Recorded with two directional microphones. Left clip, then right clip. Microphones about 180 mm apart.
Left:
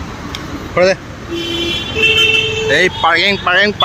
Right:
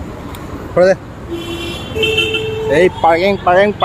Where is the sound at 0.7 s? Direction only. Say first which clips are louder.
Right 1 dB; 20° right (ahead or behind).